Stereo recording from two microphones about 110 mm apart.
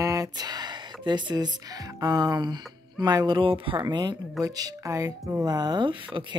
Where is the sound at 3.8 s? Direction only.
40° right (ahead or behind).